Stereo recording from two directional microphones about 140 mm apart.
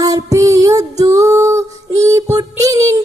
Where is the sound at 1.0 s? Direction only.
25° right (ahead or behind).